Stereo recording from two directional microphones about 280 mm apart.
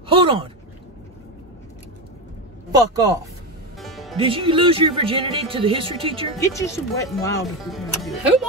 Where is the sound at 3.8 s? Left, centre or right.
Centre.